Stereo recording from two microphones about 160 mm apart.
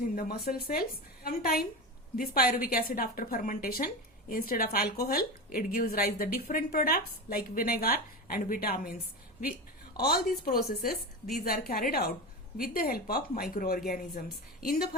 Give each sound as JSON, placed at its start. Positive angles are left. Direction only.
{"t": 0.2, "sound": "a woman's voice", "side_deg": 70}
{"t": 10.0, "sound": "a woman's voice", "side_deg": 70}